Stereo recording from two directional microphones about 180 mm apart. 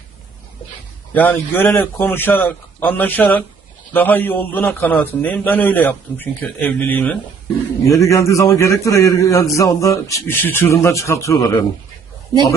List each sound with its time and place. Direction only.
1.1 s a man's voice: 10° left (ahead or behind)